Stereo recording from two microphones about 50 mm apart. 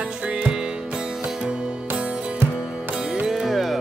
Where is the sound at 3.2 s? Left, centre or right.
Centre.